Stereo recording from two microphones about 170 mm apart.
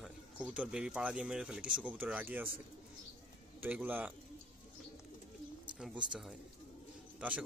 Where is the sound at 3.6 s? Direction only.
10° right (ahead or behind).